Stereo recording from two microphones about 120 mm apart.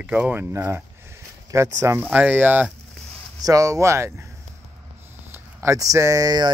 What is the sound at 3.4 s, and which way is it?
Speech, 30° right (ahead or behind).